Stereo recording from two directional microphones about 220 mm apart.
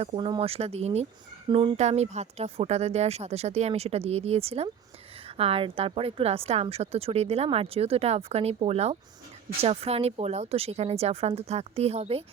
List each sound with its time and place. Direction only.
0.0 s a woman's voice: 25° right (ahead or behind)